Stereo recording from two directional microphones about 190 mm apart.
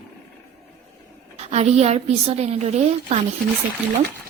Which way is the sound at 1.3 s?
35° right (ahead or behind).